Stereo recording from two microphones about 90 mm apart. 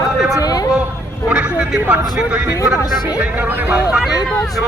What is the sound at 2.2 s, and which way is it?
Speech, 15° right (ahead or behind).